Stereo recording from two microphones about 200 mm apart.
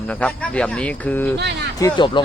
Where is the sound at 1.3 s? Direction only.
60° right (ahead or behind).